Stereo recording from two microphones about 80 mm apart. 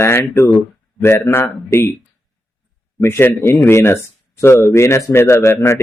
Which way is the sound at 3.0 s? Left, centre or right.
Left.